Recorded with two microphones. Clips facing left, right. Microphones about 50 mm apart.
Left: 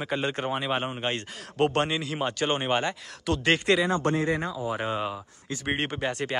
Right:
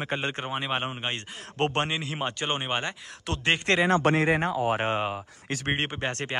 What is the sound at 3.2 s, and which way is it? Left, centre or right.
Speech, right.